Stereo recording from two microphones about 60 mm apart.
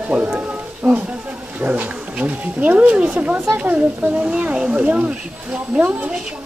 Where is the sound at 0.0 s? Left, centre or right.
Right.